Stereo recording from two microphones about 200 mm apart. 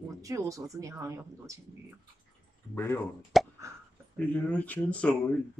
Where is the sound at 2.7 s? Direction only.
10° left (ahead or behind).